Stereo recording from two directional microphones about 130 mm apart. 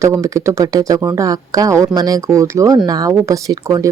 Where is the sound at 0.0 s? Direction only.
25° right (ahead or behind).